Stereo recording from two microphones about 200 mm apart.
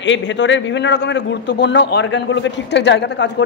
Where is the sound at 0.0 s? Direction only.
65° left (ahead or behind).